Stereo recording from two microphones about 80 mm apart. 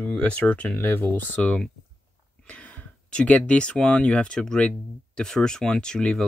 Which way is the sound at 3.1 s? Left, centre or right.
Centre.